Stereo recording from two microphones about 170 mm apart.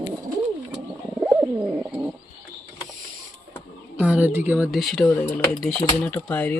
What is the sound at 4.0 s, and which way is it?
Bird, 10° right (ahead or behind).